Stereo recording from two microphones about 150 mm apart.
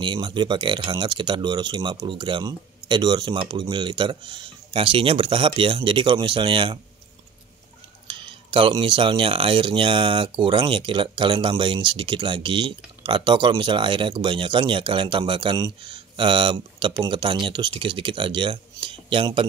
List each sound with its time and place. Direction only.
0.0 s speech: 30° right (ahead or behind)
8.1 s speech: 35° right (ahead or behind)